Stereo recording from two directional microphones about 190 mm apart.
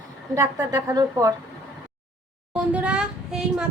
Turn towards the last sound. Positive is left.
turn(degrees=-5)  # may be behind; listen again after turning